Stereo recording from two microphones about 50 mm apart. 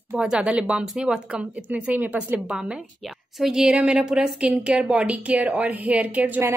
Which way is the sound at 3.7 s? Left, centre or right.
Right.